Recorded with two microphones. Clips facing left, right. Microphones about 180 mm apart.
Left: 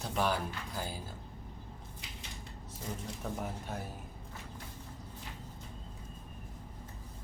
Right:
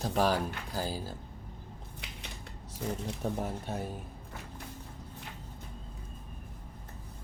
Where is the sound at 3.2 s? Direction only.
30° right (ahead or behind).